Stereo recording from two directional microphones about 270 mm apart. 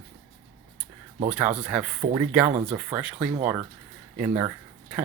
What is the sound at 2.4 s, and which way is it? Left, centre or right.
Speech, right.